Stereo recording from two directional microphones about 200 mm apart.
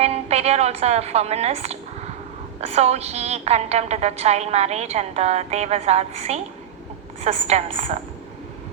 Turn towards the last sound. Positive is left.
turn(degrees=-35)  # may be behind; listen again after turning